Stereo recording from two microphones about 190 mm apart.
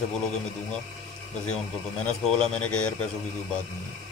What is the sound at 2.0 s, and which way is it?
Speech, 5° left (ahead or behind).